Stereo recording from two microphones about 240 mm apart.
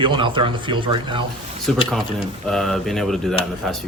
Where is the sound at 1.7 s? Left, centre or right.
Centre.